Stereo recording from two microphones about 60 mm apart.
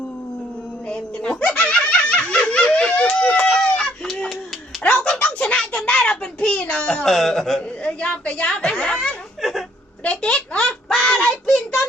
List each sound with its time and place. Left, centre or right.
0.9 s snicker: centre
4.8 s a sound: centre
5.2 s a child's voice: centre
7.9 s a woman's voice: centre
9.4 s whimper: centre
10.0 s child singing: centre
11.5 s child singing: left